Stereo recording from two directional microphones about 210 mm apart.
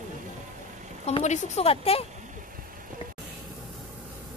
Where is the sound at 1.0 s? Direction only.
30° left (ahead or behind).